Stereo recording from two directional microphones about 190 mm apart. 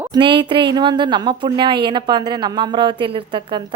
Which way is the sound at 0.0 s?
25° right (ahead or behind).